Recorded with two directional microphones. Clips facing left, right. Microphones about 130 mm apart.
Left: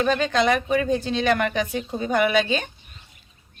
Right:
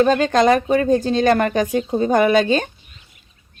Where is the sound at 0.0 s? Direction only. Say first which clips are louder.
Right 6 dB; 40° right (ahead or behind).